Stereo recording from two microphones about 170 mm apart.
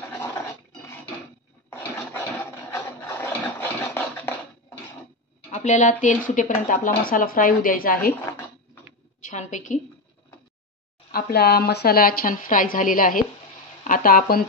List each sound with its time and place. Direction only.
1.7 s a sound: 15° left (ahead or behind)
3.8 s scratch: 10° left (ahead or behind)
5.5 s speech: 45° left (ahead or behind)
9.2 s a woman's voice: 45° left (ahead or behind)
11.1 s speech: 60° left (ahead or behind)